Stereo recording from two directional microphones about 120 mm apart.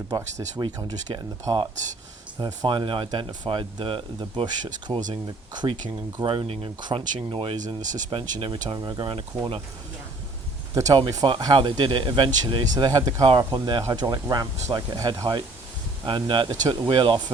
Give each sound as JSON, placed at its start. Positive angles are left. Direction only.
{"t": 0.6, "sound": "speech", "side_deg": -35}
{"t": 6.1, "sound": "speech", "side_deg": -45}
{"t": 7.6, "sound": "speech", "side_deg": -90}
{"t": 8.7, "sound": "speech", "side_deg": -35}
{"t": 9.0, "sound": "speech", "side_deg": -50}
{"t": 10.8, "sound": "speech", "side_deg": -30}
{"t": 12.7, "sound": "speech", "side_deg": -30}
{"t": 16.0, "sound": "speech", "side_deg": -40}